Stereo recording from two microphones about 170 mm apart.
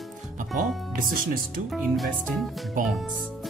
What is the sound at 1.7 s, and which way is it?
Speech, centre (ahead or behind).